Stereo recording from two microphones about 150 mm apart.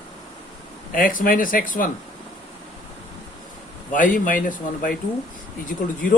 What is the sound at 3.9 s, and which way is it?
Speech, 65° left (ahead or behind).